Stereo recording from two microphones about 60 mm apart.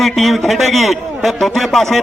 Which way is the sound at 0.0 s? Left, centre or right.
Centre.